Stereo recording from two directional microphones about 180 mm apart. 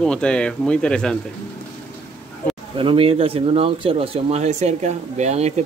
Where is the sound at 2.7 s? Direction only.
30° right (ahead or behind).